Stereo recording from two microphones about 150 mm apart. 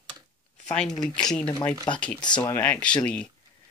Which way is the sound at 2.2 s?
30° left (ahead or behind).